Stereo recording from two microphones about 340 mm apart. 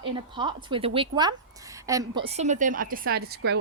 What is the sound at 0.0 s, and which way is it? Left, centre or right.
A woman's voice, centre.